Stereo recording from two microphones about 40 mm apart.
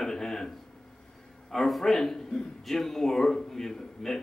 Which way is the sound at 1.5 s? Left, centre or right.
Centre.